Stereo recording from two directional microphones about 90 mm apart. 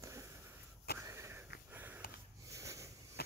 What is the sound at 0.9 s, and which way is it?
Sniff, 30° right (ahead or behind).